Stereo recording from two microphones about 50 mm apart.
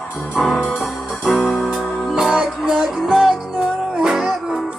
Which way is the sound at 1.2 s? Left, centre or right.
Centre.